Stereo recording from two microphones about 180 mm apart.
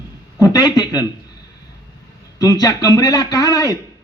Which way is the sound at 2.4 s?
20° left (ahead or behind).